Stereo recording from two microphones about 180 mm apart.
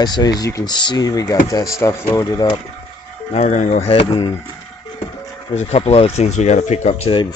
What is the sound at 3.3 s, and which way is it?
Speech, 40° left (ahead or behind).